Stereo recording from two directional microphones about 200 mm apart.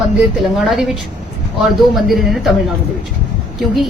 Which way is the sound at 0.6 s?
Centre (ahead or behind).